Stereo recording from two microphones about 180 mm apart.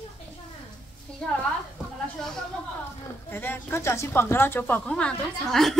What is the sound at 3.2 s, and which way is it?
A woman's voice, 10° left (ahead or behind).